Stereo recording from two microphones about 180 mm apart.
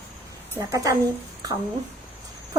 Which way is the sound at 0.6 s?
20° right (ahead or behind).